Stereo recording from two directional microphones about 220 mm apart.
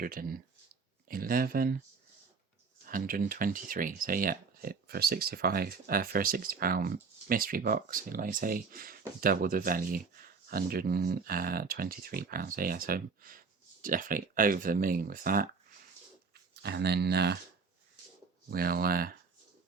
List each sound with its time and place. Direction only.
0.0 s speech: 40° right (ahead or behind)
2.8 s speech: 40° right (ahead or behind)
16.6 s speech: 50° right (ahead or behind)
18.5 s speech: 45° right (ahead or behind)